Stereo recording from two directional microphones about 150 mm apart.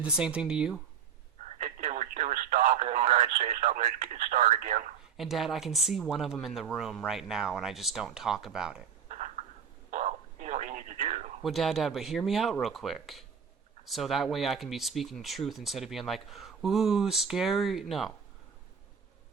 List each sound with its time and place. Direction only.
0.0 s speech: 5° right (ahead or behind)
1.4 s speech: 55° right (ahead or behind)
5.1 s speech: centre (ahead or behind)
9.0 s a sound: 50° right (ahead or behind)
9.9 s radio: 50° right (ahead or behind)
11.4 s speech: centre (ahead or behind)